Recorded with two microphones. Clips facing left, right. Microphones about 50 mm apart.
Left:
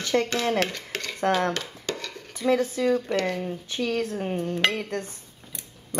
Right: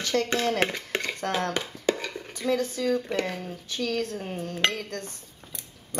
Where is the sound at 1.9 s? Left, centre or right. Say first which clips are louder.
Right 8 dB; centre.